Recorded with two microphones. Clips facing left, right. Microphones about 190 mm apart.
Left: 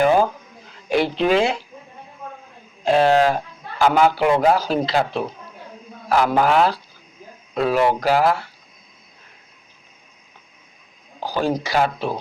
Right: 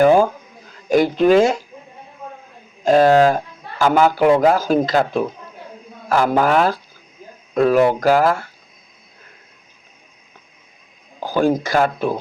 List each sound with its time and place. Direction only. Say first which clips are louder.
0.0 s a sound: right 4 dB; 45° right (ahead or behind)
0.7 s speech: right 4 dB; 45° right (ahead or behind)
2.8 s a man's voice: right 4 dB; 45° right (ahead or behind)
11.2 s a man's voice: right 5 dB; 50° right (ahead or behind)